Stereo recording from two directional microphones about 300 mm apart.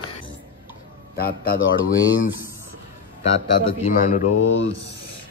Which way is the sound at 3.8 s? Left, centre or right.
Left.